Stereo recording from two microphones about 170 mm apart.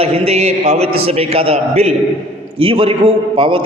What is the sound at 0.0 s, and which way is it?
A man's voice, 35° right (ahead or behind).